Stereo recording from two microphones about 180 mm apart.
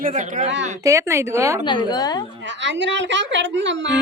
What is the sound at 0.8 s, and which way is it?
Speech, 15° right (ahead or behind).